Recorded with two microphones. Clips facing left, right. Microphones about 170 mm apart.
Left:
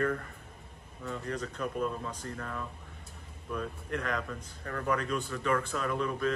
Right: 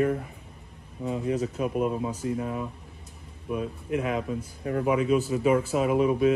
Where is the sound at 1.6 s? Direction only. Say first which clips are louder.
Right 5 dB; 60° right (ahead or behind).